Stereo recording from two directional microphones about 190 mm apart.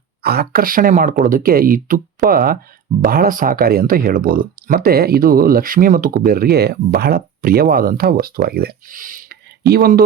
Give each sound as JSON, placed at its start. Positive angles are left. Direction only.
{"t": 0.2, "sound": "speech", "side_deg": -55}